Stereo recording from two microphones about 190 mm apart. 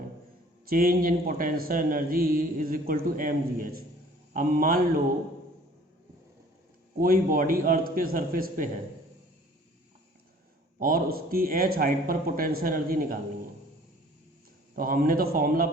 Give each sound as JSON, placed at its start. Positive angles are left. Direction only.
{"t": 0.7, "sound": "a man's voice", "side_deg": -50}
{"t": 7.0, "sound": "a man's voice", "side_deg": -50}
{"t": 10.8, "sound": "a man's voice", "side_deg": -50}
{"t": 14.8, "sound": "a man's voice", "side_deg": -50}